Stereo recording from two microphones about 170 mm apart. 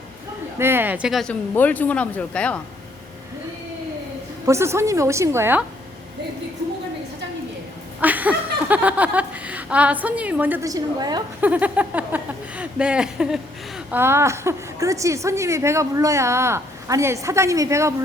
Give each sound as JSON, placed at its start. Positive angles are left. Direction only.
{"t": 0.6, "sound": "speech", "side_deg": -10}
{"t": 4.4, "sound": "a woman's voice", "side_deg": -15}
{"t": 8.0, "sound": "speech", "side_deg": -10}
{"t": 11.3, "sound": "speech", "side_deg": -10}
{"t": 14.0, "sound": "a woman's voice", "side_deg": -15}